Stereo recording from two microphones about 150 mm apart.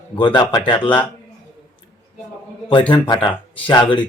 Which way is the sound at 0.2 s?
30° left (ahead or behind).